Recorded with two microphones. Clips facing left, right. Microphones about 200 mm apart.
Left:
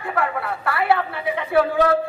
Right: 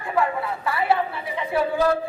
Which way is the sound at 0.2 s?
65° left (ahead or behind).